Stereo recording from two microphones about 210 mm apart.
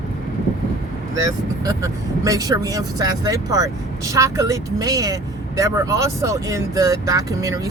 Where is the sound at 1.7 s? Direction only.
15° right (ahead or behind).